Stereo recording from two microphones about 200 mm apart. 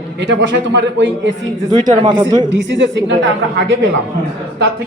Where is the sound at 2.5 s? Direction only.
65° right (ahead or behind).